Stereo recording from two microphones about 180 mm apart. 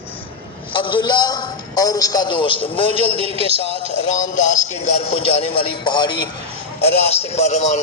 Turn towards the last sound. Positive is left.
turn(degrees=40)  # may be behind; listen again after turning